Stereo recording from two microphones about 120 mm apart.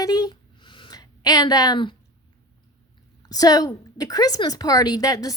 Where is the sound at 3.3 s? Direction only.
30° left (ahead or behind).